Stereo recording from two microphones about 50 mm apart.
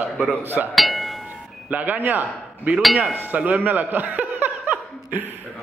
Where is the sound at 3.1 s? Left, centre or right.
Right.